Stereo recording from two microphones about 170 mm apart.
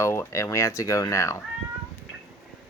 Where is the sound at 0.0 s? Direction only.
15° left (ahead or behind).